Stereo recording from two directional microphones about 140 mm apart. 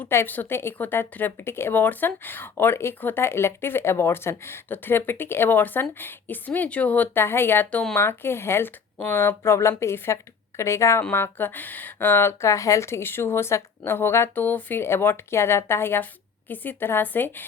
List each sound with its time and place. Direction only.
0.0 s a woman's voice: 15° left (ahead or behind)